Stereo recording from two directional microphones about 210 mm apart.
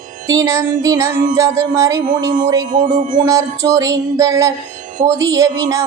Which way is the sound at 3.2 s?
15° right (ahead or behind).